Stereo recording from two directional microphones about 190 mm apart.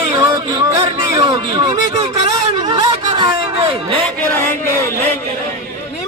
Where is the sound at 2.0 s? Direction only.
30° right (ahead or behind).